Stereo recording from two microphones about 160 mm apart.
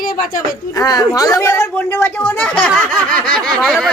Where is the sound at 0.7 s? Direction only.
20° left (ahead or behind).